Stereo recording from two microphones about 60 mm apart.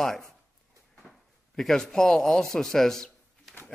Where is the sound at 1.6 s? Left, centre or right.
Centre.